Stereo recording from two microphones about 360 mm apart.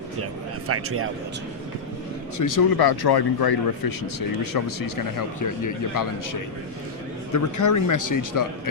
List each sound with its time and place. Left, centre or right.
0.7 s a man's voice: right
2.4 s speech: left
4.5 s a man's voice: left
7.3 s a man's voice: left